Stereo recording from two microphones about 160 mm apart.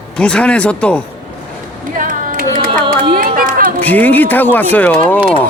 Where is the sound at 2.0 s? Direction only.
60° right (ahead or behind).